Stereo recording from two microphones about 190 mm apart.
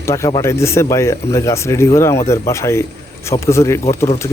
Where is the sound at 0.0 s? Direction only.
15° left (ahead or behind).